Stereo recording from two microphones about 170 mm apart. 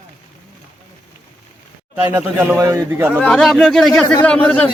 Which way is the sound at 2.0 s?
10° right (ahead or behind).